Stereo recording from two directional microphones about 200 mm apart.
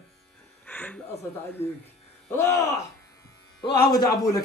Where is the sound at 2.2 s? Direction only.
10° left (ahead or behind).